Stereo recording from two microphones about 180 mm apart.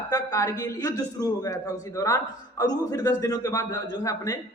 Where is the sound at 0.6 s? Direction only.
20° left (ahead or behind).